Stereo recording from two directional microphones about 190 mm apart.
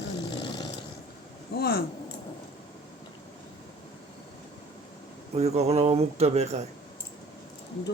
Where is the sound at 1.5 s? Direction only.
55° left (ahead or behind).